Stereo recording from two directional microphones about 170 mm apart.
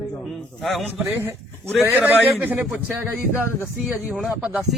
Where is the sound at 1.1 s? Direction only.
15° right (ahead or behind).